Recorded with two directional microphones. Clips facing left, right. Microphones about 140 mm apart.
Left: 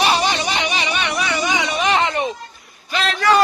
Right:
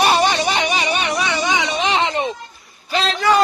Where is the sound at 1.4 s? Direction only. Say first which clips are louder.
Right 1 dB; 25° right (ahead or behind).